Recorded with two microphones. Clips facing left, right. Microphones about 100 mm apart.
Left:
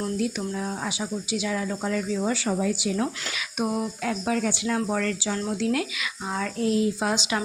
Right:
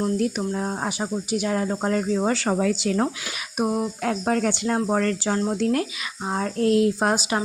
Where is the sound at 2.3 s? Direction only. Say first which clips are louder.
Right 3 dB; 60° right (ahead or behind).